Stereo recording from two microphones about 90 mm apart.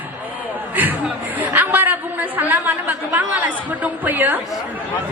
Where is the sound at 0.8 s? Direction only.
20° right (ahead or behind).